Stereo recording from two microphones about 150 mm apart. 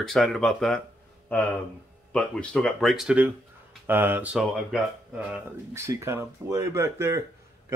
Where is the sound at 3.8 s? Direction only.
15° right (ahead or behind).